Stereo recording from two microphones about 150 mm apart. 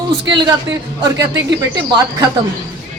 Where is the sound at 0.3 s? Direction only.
30° right (ahead or behind).